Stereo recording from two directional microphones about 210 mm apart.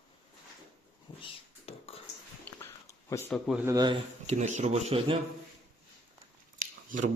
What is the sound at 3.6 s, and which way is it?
Speech, 20° right (ahead or behind).